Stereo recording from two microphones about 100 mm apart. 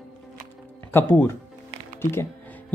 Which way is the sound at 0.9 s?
20° left (ahead or behind).